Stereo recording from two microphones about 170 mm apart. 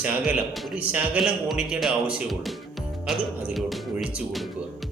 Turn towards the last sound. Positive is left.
turn(degrees=0)  # may be behind; listen again after turning